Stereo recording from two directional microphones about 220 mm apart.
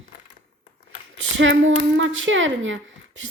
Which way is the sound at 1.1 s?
60° right (ahead or behind).